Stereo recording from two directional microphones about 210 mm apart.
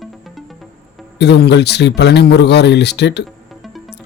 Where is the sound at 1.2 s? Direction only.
55° left (ahead or behind).